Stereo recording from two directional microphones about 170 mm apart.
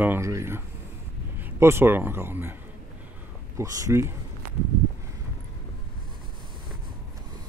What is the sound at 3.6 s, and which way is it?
Speech, 15° right (ahead or behind).